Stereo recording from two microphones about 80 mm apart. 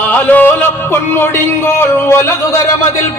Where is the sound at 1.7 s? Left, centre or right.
Left.